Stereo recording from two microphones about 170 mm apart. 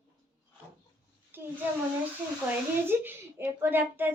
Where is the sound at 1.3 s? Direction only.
10° right (ahead or behind).